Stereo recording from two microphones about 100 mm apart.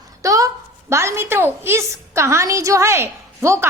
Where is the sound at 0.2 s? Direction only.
35° right (ahead or behind).